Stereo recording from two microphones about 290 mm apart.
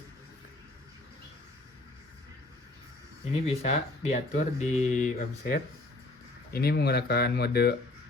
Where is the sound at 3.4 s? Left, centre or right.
Left.